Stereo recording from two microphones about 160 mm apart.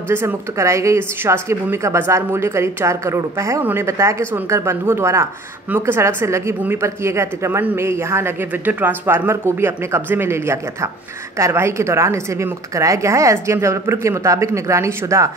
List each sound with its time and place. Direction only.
0.1 s speech: 15° right (ahead or behind)